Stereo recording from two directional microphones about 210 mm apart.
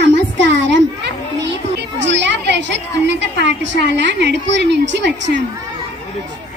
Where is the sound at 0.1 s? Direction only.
55° right (ahead or behind).